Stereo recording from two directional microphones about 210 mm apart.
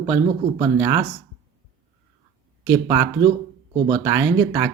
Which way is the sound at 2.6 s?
20° right (ahead or behind).